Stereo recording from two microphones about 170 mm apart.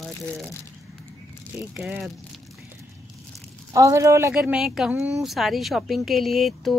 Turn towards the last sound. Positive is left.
turn(degrees=0)  # may be behind; listen again after turning